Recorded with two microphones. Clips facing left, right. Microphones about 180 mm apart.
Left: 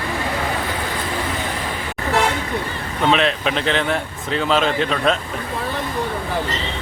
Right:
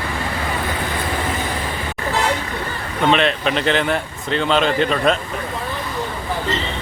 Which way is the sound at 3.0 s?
Centre (ahead or behind).